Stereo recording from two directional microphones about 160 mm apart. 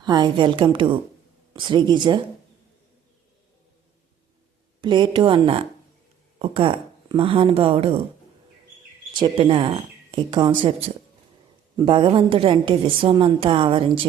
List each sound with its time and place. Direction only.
0.0 s a woman's voice: 25° right (ahead or behind)
4.8 s a woman's voice: 30° right (ahead or behind)
9.1 s a woman's voice: 30° right (ahead or behind)